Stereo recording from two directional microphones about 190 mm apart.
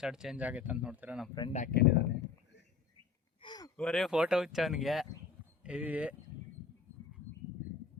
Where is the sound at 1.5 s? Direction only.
40° left (ahead or behind).